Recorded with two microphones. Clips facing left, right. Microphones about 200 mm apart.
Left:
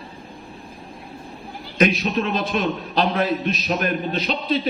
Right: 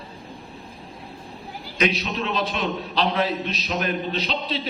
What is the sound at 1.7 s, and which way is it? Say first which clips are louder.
A man's voice: left 5 dB; 50° left (ahead or behind).